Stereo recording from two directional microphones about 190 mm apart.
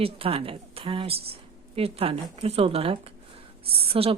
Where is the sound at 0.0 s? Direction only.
30° right (ahead or behind).